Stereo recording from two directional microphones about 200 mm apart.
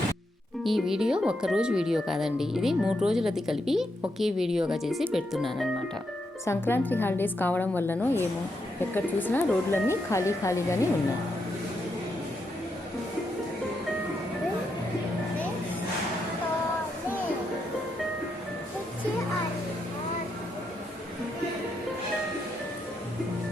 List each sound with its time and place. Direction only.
0.6 s speech: centre (ahead or behind)
6.4 s a woman's voice: 10° left (ahead or behind)